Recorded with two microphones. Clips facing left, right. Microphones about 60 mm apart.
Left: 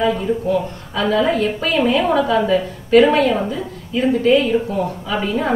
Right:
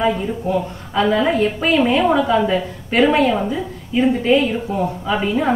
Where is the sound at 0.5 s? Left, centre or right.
Right.